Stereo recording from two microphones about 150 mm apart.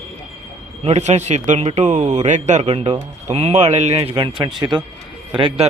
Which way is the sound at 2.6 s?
35° right (ahead or behind).